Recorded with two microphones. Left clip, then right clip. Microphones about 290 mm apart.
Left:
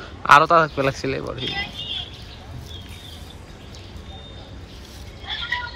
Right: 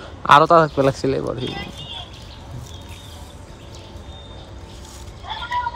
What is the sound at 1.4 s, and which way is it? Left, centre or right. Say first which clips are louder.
Speech: left 2 dB; right.